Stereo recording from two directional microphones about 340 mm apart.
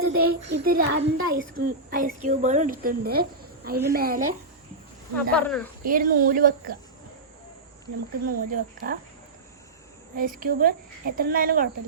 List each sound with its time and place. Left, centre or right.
0.0 s speech: right
0.4 s speech: right
5.3 s speech: centre
5.8 s speech: right
8.3 s speech: right
10.2 s speech: right